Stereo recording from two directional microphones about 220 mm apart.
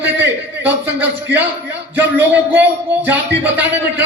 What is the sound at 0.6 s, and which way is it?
A man's voice, 10° right (ahead or behind).